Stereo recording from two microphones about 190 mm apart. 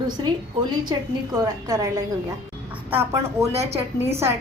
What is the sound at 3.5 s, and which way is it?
Speech, 35° right (ahead or behind).